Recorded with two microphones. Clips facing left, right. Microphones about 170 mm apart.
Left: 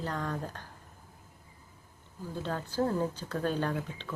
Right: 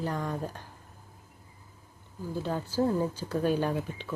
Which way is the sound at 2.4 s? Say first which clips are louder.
Right 3 dB; 10° right (ahead or behind).